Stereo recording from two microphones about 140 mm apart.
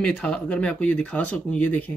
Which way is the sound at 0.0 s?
5° left (ahead or behind).